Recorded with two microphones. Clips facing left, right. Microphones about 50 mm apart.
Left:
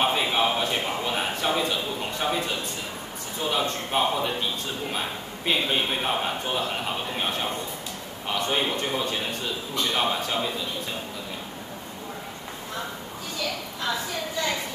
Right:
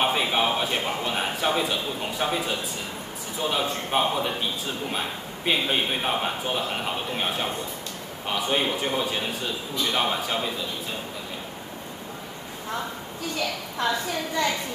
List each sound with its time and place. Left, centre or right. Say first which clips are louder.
0.0 s a man's voice: even; centre